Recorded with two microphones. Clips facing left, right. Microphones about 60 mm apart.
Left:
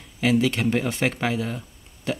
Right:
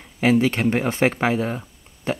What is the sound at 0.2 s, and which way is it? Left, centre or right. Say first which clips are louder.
Speech: right 3 dB; right.